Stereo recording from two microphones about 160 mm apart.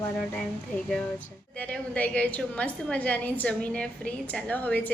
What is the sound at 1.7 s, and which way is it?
A woman's voice, 5° left (ahead or behind).